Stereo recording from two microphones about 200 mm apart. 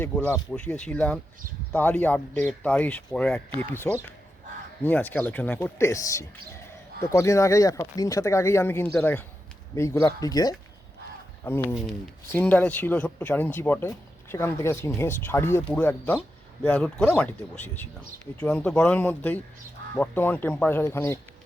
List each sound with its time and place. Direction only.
0.0 s speech: 10° left (ahead or behind)